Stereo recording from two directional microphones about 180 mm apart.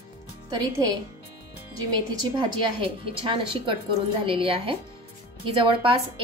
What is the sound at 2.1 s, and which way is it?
Speech, 25° right (ahead or behind).